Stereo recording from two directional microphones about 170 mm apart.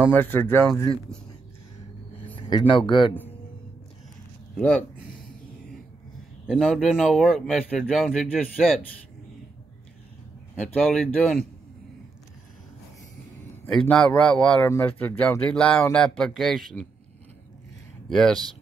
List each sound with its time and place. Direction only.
0.0 s speech: 10° left (ahead or behind)
2.1 s speech: 30° left (ahead or behind)
4.6 s speech: 10° left (ahead or behind)
6.4 s speech: centre (ahead or behind)
10.6 s speech: 5° left (ahead or behind)
13.7 s speech: 5° left (ahead or behind)
18.0 s speech: centre (ahead or behind)